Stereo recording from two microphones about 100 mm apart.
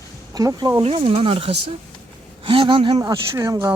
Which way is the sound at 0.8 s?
70° right (ahead or behind).